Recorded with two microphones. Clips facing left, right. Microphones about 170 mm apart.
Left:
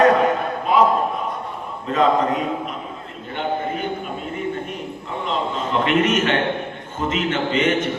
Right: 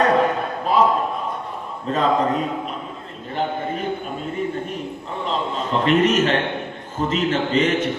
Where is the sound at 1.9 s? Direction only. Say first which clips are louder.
Left 1 dB; 35° right (ahead or behind).